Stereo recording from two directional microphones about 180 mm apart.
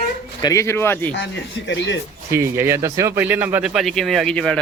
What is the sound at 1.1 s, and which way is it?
Speech, 80° left.